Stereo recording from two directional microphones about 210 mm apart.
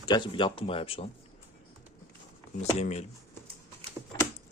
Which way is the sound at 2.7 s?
30° left (ahead or behind).